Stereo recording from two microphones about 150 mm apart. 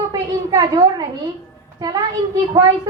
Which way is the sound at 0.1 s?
25° right (ahead or behind).